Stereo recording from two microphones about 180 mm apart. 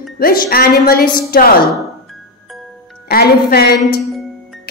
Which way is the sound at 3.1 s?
60° left (ahead or behind).